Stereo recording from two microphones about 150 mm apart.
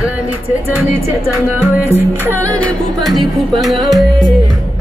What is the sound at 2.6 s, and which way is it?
Music, centre (ahead or behind).